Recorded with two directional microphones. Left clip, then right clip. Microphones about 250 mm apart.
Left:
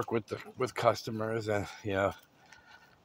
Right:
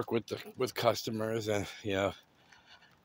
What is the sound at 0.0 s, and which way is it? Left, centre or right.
Speech, centre.